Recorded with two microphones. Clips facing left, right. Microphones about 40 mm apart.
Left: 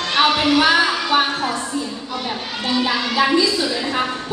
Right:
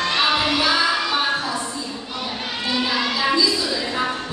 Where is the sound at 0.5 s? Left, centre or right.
Left.